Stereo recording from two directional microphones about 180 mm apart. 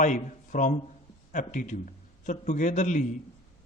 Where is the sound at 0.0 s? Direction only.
45° left (ahead or behind).